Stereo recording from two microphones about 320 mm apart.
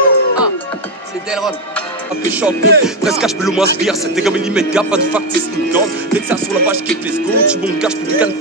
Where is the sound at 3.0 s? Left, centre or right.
Centre.